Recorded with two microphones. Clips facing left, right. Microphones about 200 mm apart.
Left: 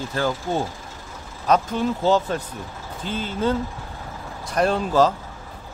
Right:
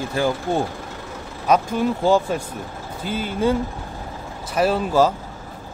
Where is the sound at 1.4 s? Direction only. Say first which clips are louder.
Right 2 dB; 10° right (ahead or behind).